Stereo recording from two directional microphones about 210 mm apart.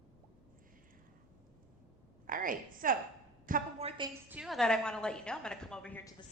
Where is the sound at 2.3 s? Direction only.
40° right (ahead or behind).